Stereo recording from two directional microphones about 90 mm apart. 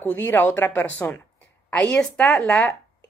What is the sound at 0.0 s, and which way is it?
A woman's voice, 20° left (ahead or behind).